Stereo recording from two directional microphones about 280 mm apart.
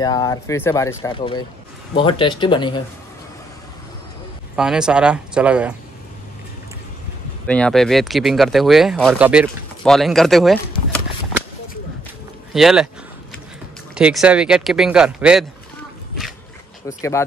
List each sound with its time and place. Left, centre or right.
0.0 s speech: centre
4.6 s speech: centre
7.4 s speech: centre
12.5 s speech: centre
13.9 s speech: centre
16.8 s speech: centre